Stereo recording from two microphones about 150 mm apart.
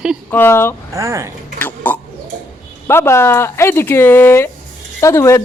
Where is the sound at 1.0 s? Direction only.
20° right (ahead or behind).